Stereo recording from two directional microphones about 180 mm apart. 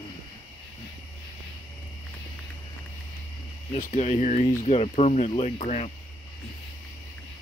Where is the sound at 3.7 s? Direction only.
40° left (ahead or behind).